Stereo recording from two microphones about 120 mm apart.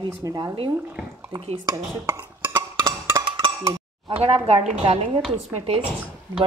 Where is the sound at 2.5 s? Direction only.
35° right (ahead or behind).